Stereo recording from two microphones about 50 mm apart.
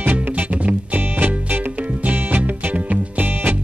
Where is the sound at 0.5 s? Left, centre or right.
Right.